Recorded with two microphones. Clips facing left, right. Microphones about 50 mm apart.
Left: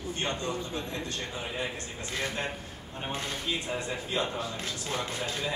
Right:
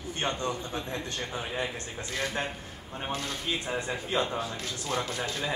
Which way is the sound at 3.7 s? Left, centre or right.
Right.